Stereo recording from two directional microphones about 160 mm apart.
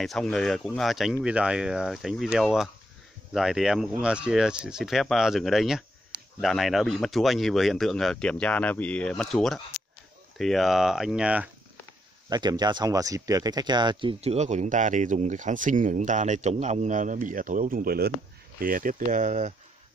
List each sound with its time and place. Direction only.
0.0 s speech: centre (ahead or behind)
12.3 s speech: 25° right (ahead or behind)
14.2 s speech: 45° right (ahead or behind); by 18.1 s 70° right (ahead or behind)
18.6 s speech: 60° right (ahead or behind)